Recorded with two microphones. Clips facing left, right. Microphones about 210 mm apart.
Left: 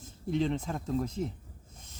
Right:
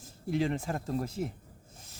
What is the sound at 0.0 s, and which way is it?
Speech, 10° right (ahead or behind).